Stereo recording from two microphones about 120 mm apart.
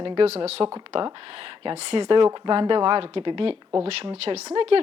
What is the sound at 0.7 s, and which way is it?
A woman's voice, 45° right (ahead or behind).